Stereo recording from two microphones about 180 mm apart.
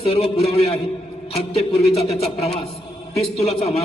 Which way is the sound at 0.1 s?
35° left (ahead or behind).